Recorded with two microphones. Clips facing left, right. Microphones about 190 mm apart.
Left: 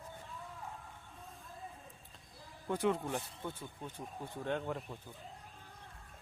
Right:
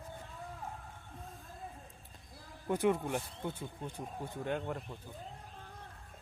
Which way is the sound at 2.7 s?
15° right (ahead or behind).